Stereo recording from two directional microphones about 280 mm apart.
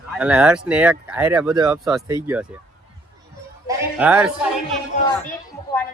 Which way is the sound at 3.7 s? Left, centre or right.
Centre.